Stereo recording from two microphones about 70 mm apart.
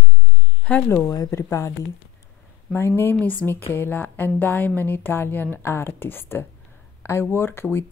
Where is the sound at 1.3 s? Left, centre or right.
Left.